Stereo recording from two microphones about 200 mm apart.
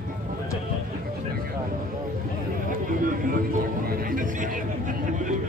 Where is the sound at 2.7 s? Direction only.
45° right (ahead or behind).